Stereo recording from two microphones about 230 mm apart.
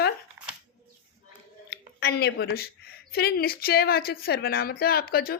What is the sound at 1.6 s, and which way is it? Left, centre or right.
A woman's voice, left.